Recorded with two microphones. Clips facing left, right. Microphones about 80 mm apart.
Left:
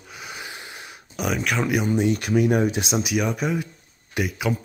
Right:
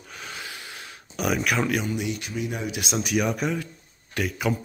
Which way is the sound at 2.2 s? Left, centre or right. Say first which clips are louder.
Left 11 dB; left.